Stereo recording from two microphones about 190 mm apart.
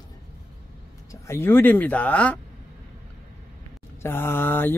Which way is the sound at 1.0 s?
15° left (ahead or behind).